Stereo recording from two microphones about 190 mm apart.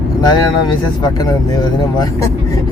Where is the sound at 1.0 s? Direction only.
20° left (ahead or behind).